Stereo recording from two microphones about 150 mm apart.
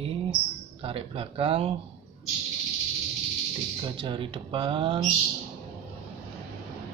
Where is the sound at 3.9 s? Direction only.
35° right (ahead or behind).